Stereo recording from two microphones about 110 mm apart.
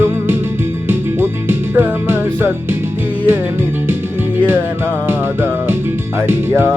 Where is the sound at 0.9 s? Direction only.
20° right (ahead or behind).